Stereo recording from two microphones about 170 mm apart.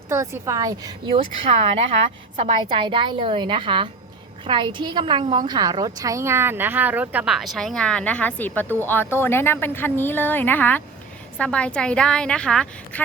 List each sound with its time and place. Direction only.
0.1 s a woman's voice: 15° right (ahead or behind)
1.1 s speech: 35° right (ahead or behind)
2.3 s a woman's voice: 45° right (ahead or behind)
2.6 s a woman's voice: 30° right (ahead or behind); by 13.0 s 5° left (ahead or behind)